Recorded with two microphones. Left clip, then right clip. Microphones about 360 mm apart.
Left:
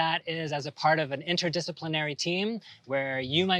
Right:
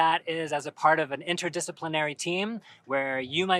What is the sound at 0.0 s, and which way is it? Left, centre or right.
Speech, left.